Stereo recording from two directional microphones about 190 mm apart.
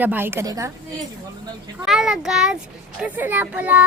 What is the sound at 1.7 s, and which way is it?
A child's voice, centre (ahead or behind).